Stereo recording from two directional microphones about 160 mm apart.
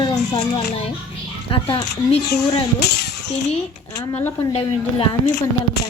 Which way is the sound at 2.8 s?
90° left.